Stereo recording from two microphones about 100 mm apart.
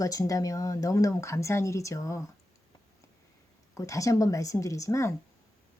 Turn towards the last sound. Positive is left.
turn(degrees=30)  # may be behind; listen again after turning